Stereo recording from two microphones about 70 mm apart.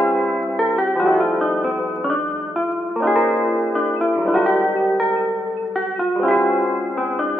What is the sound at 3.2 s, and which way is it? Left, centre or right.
Music, left.